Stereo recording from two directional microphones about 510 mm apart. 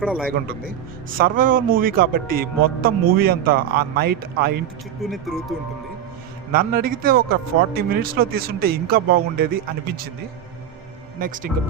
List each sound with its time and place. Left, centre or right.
0.0 s speech: centre
0.3 s speech: centre
5.0 s speech: centre
6.5 s speech: centre
11.2 s speech: centre